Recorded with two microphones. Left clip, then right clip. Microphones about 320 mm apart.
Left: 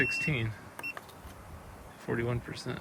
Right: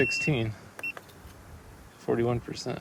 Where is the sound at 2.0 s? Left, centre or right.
Centre.